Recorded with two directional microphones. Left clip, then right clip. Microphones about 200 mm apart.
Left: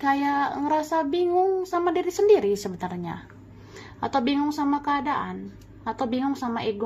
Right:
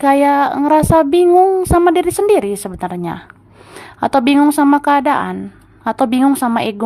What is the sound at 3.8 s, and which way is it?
A woman's voice, 45° right (ahead or behind).